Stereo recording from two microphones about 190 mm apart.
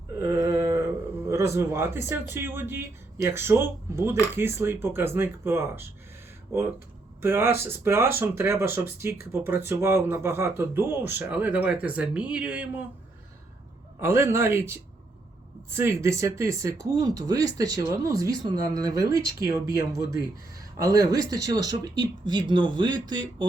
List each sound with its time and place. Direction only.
0.2 s a sound: 15° right (ahead or behind)
1.3 s speech: 15° right (ahead or behind)
14.0 s speech: 15° right (ahead or behind)